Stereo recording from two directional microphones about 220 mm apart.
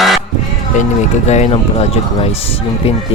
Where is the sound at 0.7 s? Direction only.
35° left (ahead or behind).